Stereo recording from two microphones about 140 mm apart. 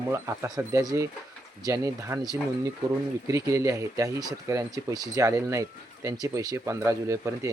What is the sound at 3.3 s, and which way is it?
Speech, 20° right (ahead or behind).